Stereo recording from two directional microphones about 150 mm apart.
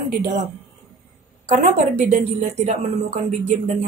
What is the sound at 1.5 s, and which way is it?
A woman's voice, 50° right (ahead or behind).